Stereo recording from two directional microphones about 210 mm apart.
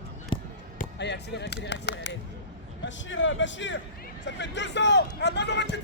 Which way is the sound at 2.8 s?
60° left (ahead or behind).